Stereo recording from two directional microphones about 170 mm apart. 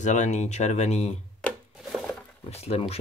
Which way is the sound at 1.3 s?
Centre (ahead or behind).